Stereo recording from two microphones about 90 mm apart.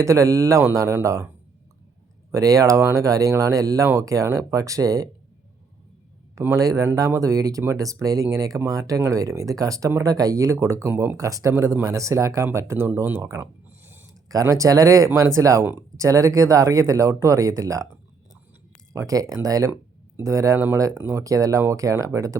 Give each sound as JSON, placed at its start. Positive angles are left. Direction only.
{"t": 0.0, "sound": "speech", "side_deg": -35}
{"t": 2.3, "sound": "speech", "side_deg": -40}
{"t": 6.6, "sound": "speech", "side_deg": -40}
{"t": 11.2, "sound": "speech", "side_deg": -40}
{"t": 13.8, "sound": "a sound", "side_deg": -25}
{"t": 14.1, "sound": "speech", "side_deg": -40}
{"t": 18.9, "sound": "speech", "side_deg": -40}